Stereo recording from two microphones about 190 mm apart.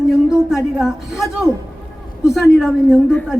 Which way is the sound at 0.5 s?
5° right (ahead or behind).